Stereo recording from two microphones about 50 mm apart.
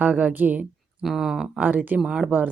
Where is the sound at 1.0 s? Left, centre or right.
Centre.